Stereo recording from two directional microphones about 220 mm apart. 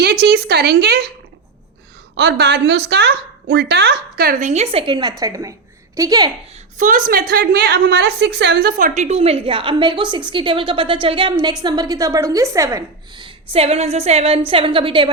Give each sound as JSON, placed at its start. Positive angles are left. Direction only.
{"t": 0.0, "sound": "a woman's voice", "side_deg": -45}
{"t": 2.1, "sound": "a woman's voice", "side_deg": -50}
{"t": 6.7, "sound": "a woman's voice", "side_deg": -40}